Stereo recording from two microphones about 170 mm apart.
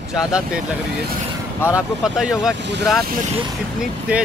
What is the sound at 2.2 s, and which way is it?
Speech, 5° right (ahead or behind).